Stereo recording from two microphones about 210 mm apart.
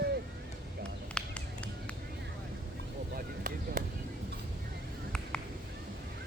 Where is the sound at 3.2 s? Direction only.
40° right (ahead or behind).